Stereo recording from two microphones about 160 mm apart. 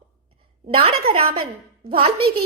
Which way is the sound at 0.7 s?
35° right (ahead or behind).